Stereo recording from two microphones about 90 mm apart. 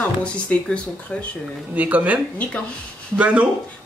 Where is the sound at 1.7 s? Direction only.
15° right (ahead or behind).